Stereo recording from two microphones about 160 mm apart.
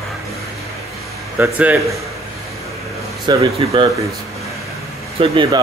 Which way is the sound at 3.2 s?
30° right (ahead or behind).